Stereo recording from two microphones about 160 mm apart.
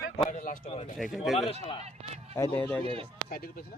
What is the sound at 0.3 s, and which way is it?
Speech, 55° left (ahead or behind).